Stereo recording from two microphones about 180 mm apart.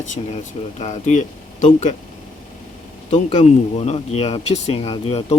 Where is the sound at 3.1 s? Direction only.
40° left (ahead or behind).